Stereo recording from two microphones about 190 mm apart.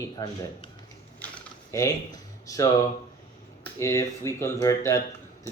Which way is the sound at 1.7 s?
15° left (ahead or behind).